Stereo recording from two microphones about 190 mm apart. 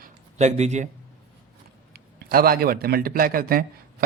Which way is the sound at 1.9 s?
50° right (ahead or behind).